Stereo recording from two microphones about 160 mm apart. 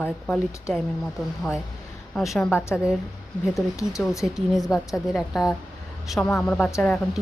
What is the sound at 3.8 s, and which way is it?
Speech, 20° left (ahead or behind).